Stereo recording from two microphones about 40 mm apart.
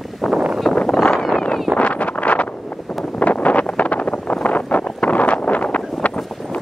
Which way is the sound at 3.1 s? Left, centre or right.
Left.